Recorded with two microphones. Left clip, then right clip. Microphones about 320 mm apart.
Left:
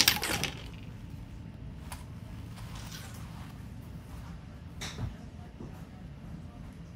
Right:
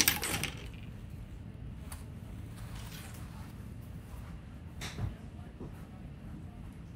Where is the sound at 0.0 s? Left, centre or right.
Left.